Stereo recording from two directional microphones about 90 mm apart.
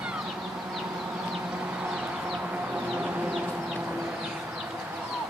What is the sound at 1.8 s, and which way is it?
Chicken, 10° right (ahead or behind).